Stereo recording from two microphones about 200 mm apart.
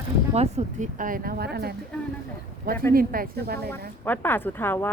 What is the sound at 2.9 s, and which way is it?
Speech, 45° right (ahead or behind).